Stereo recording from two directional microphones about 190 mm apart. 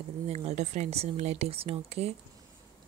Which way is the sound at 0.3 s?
35° right (ahead or behind).